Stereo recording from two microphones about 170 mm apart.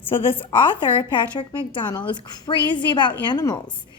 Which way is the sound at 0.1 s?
30° left (ahead or behind).